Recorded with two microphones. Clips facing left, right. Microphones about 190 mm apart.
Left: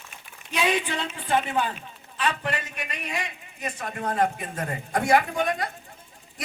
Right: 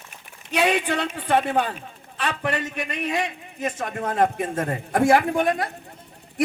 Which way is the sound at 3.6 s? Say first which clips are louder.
Right 4 dB; 50° right (ahead or behind).